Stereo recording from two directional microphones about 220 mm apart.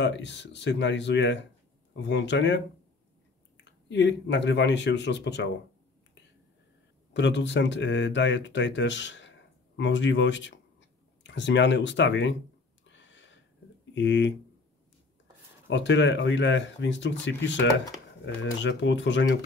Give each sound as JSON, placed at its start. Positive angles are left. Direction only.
{"t": 0.0, "sound": "speech", "side_deg": 50}
{"t": 3.9, "sound": "speech", "side_deg": 50}
{"t": 7.2, "sound": "speech", "side_deg": 55}
{"t": 12.8, "sound": "a sound", "side_deg": 55}
{"t": 13.9, "sound": "speech", "side_deg": 55}
{"t": 15.7, "sound": "speech", "side_deg": 55}